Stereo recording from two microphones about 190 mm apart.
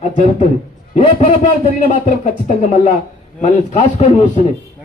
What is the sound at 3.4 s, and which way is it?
Speech, 35° left (ahead or behind).